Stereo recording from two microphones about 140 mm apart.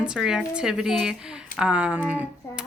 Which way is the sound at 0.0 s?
5° right (ahead or behind).